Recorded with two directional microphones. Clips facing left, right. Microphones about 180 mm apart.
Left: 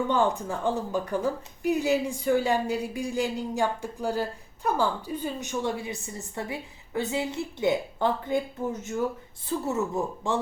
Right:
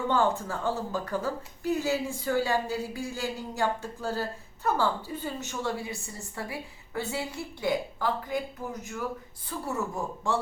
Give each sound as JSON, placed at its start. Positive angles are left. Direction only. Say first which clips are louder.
{"t": 0.1, "sound": "a woman's voice", "louder": "left 1 dB", "side_deg": 15}